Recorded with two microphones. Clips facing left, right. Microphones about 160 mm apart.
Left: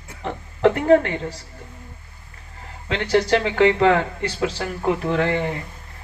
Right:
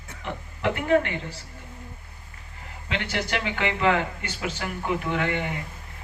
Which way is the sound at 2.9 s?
35° left (ahead or behind).